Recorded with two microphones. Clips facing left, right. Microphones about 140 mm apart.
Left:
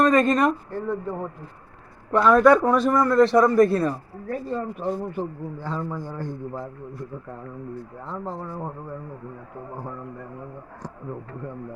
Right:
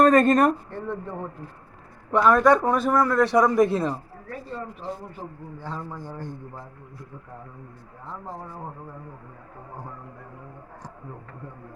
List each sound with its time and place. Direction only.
0.0 s speech: 40° right (ahead or behind)
0.7 s speech: 5° left (ahead or behind)
2.1 s a man's voice: 5° right (ahead or behind); by 3.9 s 20° right (ahead or behind)
4.3 s speech: 45° left (ahead or behind)